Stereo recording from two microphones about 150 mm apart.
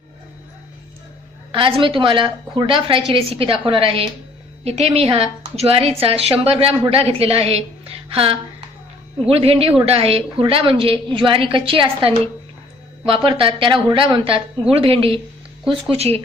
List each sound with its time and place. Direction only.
1.5 s a woman's voice: 35° right (ahead or behind)